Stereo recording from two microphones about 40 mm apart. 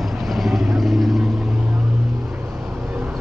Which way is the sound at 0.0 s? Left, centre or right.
Centre.